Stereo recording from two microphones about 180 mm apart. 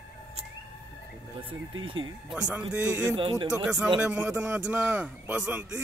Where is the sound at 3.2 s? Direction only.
25° right (ahead or behind).